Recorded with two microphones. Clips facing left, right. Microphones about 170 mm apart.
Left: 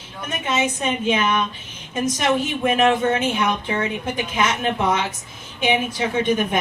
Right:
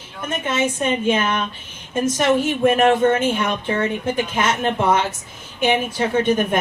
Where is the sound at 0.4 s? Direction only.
50° right (ahead or behind).